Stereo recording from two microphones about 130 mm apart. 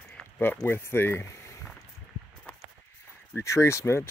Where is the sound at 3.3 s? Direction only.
20° left (ahead or behind).